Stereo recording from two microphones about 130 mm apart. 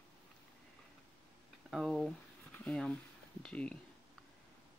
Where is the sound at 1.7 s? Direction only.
Centre (ahead or behind).